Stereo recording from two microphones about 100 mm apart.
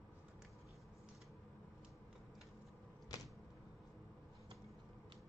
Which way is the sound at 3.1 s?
35° left (ahead or behind).